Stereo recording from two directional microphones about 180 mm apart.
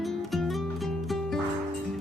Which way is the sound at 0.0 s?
Centre (ahead or behind).